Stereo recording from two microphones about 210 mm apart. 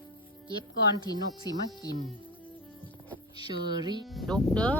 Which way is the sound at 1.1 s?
20° left (ahead or behind).